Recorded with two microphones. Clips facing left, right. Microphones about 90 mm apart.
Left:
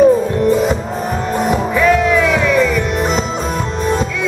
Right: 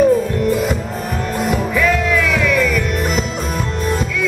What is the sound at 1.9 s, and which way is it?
Music, centre (ahead or behind).